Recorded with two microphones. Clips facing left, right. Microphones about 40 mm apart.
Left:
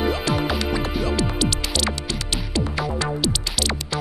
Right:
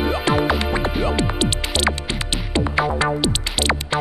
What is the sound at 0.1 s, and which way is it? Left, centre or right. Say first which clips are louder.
Music: right 4 dB; right.